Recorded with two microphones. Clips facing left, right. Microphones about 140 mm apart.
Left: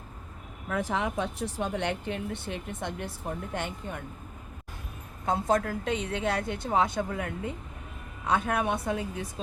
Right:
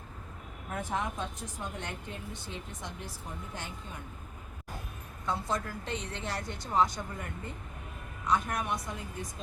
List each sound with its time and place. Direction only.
0.7 s a woman's voice: 90° left; by 4.0 s 60° left (ahead or behind)
5.2 s a woman's voice: 50° left (ahead or behind); by 7.5 s 85° left
8.3 s a woman's voice: 65° left (ahead or behind)